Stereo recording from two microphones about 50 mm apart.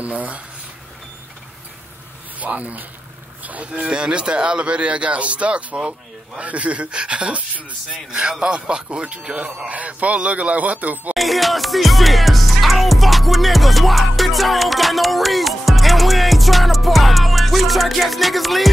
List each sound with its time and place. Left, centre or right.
0.0 s speech: right
2.4 s speech: right
3.8 s speech: centre
11.1 s music: centre